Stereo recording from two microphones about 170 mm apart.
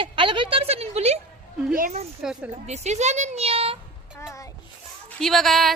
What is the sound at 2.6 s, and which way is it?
A woman's voice, 40° right (ahead or behind).